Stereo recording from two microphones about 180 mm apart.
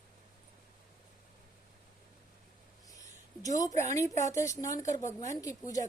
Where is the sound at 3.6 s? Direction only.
20° left (ahead or behind).